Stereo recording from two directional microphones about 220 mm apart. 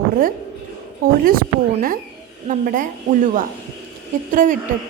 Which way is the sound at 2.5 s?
35° right (ahead or behind).